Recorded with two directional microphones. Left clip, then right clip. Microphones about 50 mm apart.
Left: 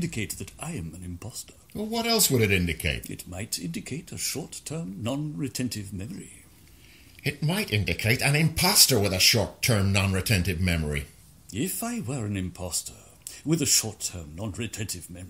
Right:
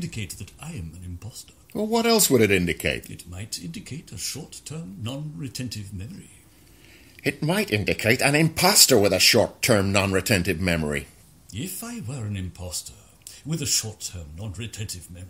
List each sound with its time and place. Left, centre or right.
0.0 s speech: left
1.7 s speech: right
3.0 s speech: left
7.2 s speech: right
11.5 s speech: left